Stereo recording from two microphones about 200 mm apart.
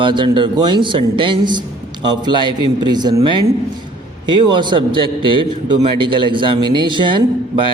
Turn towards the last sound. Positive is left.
turn(degrees=-25)  # may be behind; listen again after turning